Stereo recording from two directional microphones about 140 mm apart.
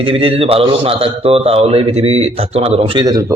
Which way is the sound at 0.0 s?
40° right (ahead or behind).